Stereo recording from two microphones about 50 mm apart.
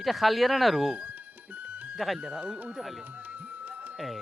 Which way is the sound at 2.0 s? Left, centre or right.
Centre.